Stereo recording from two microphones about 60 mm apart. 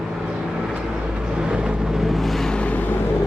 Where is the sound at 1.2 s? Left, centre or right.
Centre.